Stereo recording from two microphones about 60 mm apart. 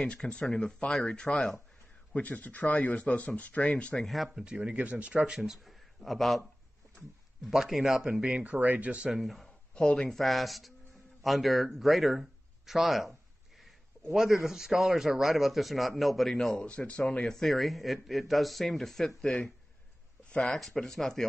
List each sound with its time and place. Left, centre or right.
0.0 s speech: centre
2.1 s a man's voice: left
4.0 s a man's voice: centre
8.1 s speech: centre
9.1 s a man's voice: centre
9.8 s speech: centre
10.1 s a man's voice: centre
16.6 s a man's voice: centre
20.2 s a sound: centre
20.5 s a man's voice: centre